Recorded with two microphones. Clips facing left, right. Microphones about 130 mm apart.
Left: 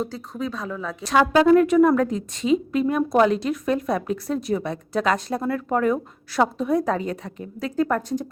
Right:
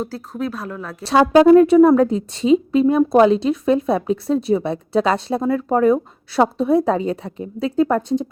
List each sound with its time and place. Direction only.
0.1 s speech: 5° right (ahead or behind)
1.0 s a woman's voice: 35° right (ahead or behind)